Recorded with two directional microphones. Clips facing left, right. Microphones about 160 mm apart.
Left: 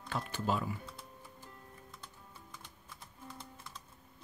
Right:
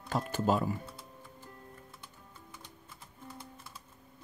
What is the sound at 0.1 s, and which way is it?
Speech, 45° right (ahead or behind).